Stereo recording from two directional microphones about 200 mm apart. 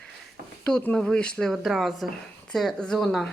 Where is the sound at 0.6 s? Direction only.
5° left (ahead or behind).